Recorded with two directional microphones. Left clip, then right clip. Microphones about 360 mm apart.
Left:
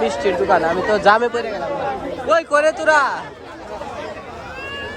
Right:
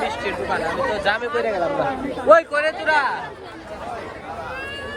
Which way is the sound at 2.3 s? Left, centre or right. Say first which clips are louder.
Even; centre.